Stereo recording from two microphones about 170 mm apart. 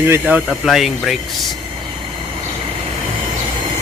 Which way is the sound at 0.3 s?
10° right (ahead or behind).